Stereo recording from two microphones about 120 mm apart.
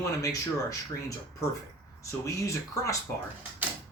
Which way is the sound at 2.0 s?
25° left (ahead or behind).